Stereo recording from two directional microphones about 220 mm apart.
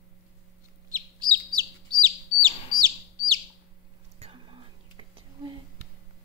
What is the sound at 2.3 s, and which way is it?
Bird, 20° left (ahead or behind).